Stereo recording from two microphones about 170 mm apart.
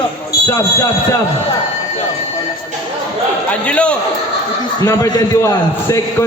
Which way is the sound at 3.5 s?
5° left (ahead or behind).